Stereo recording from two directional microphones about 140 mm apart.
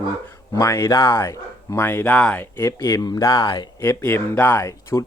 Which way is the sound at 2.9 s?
25° left (ahead or behind).